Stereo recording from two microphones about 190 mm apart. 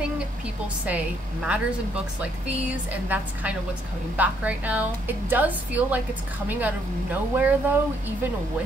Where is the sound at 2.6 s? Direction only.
5° right (ahead or behind).